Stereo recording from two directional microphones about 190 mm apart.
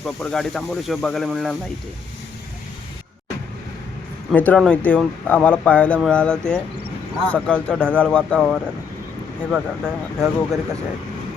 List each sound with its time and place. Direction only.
0.0 s speech: centre (ahead or behind)
4.3 s speech: 5° left (ahead or behind)